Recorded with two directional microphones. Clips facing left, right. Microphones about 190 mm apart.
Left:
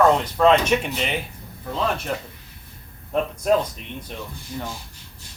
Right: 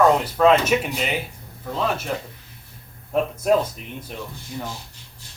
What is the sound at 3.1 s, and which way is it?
Speech, 5° right (ahead or behind).